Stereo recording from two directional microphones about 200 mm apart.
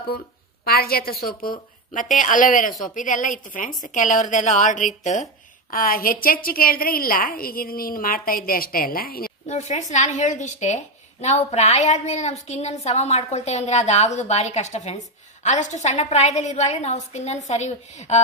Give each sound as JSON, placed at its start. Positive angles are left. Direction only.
{"t": 0.7, "sound": "a woman's voice", "side_deg": 50}